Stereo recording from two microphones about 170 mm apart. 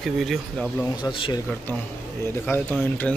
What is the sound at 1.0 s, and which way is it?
Speech, 25° left (ahead or behind).